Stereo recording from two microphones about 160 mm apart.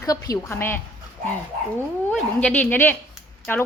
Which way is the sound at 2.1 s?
10° left (ahead or behind).